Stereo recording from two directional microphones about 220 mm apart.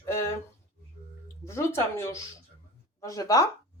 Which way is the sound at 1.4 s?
10° left (ahead or behind).